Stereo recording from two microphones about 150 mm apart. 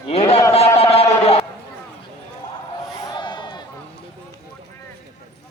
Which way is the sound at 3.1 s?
30° left (ahead or behind).